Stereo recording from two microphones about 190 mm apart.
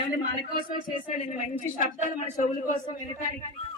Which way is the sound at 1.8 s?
45° left (ahead or behind).